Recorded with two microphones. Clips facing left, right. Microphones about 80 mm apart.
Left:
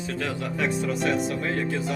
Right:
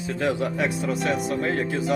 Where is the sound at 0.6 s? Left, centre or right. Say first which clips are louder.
Left 3 dB; centre.